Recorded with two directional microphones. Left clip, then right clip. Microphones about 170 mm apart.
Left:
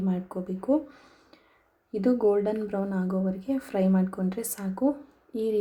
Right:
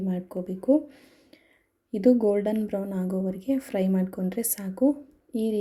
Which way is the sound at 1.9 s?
35° right (ahead or behind).